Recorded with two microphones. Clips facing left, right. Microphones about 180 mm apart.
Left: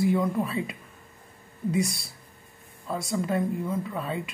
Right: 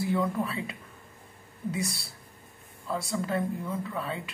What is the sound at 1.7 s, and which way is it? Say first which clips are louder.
Speech: left 9 dB; 15° left (ahead or behind).